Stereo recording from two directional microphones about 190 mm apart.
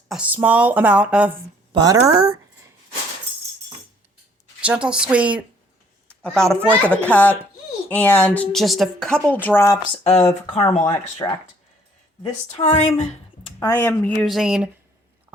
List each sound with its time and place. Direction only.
0.1 s speech: 10° right (ahead or behind)
1.7 s speech: 20° right (ahead or behind)
4.6 s a child's voice: 5° right (ahead or behind)
6.6 s speech: 10° right (ahead or behind)
6.9 s a woman's voice: 10° left (ahead or behind)
10.0 s speech: 35° left (ahead or behind)
11.2 s a woman's voice: 15° left (ahead or behind)
12.2 s speech: 30° left (ahead or behind)
13.6 s a woman's voice: 15° left (ahead or behind); by 14.7 s 5° right (ahead or behind)